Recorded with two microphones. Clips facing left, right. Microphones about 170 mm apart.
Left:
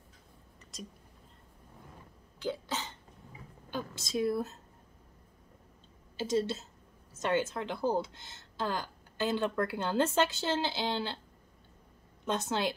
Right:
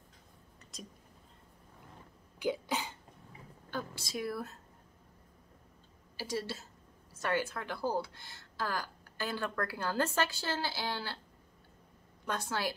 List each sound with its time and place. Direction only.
0.6 s whispering: centre (ahead or behind)
2.3 s cough: 15° right (ahead or behind)
3.7 s speech: 20° left (ahead or behind)
6.1 s speech: 25° left (ahead or behind)
12.3 s speech: 20° left (ahead or behind)